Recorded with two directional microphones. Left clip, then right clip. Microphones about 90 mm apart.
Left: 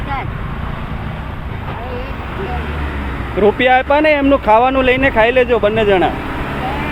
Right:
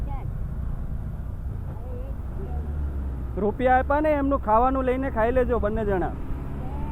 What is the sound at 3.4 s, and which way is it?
Speech, 15° left (ahead or behind).